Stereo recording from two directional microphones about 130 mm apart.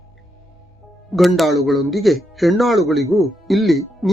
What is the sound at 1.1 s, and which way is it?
Speech, centre (ahead or behind).